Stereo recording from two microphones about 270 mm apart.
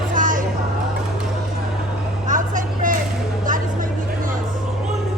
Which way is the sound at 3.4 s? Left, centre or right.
Right.